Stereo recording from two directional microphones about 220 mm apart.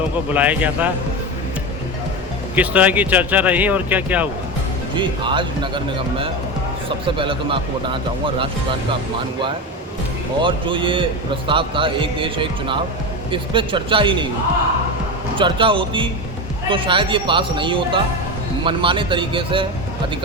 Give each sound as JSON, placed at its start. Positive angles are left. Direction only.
{"t": 0.3, "sound": "speech", "side_deg": -5}
{"t": 2.6, "sound": "speech", "side_deg": -5}
{"t": 4.9, "sound": "speech", "side_deg": -20}
{"t": 10.4, "sound": "speech", "side_deg": -20}
{"t": 15.4, "sound": "speech", "side_deg": -20}